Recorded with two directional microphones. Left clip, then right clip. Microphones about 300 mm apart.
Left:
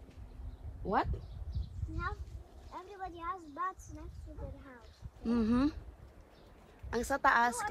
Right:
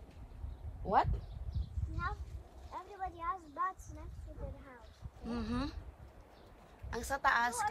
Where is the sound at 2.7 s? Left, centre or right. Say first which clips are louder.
Right 1 dB; right.